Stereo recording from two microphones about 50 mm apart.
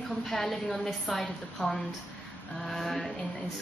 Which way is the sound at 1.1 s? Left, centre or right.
Centre.